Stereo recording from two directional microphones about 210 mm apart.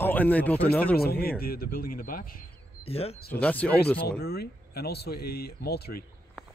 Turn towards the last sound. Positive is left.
turn(degrees=50)  # may be behind; listen again after turning